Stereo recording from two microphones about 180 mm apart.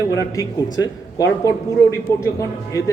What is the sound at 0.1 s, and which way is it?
A man's voice, 20° left (ahead or behind).